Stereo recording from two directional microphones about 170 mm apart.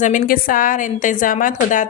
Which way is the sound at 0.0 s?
55° left (ahead or behind).